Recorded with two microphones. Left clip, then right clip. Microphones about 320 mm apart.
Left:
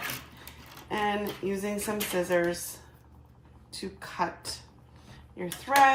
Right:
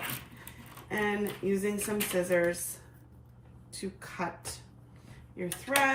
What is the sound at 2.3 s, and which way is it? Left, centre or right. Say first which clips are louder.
Speech: left 1 dB; centre.